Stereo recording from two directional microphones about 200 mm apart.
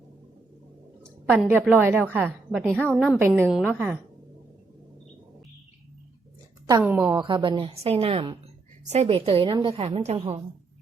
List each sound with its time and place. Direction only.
1.3 s a woman's voice: 5° right (ahead or behind)
3.2 s a woman's voice: 10° right (ahead or behind)
3.4 s a woman's voice: 5° left (ahead or behind)
6.7 s a woman's voice: 15° right (ahead or behind)
7.2 s a woman's voice: 25° right (ahead or behind)